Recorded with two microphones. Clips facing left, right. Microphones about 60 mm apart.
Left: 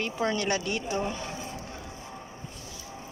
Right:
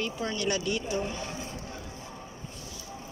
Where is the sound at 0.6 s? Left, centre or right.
Left.